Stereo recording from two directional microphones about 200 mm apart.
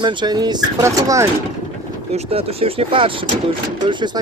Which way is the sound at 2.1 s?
30° right (ahead or behind).